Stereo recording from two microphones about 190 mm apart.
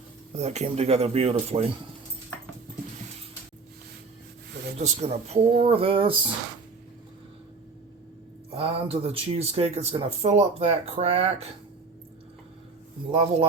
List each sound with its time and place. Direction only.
0.3 s speech: 35° right (ahead or behind)
4.8 s speech: 35° right (ahead or behind)
8.4 s speech: 30° right (ahead or behind)
13.1 s speech: 30° right (ahead or behind)